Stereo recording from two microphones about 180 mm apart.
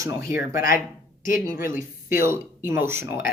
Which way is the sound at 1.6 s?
50° left (ahead or behind).